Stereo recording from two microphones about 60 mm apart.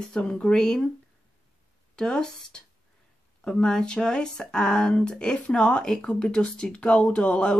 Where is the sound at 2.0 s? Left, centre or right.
Centre.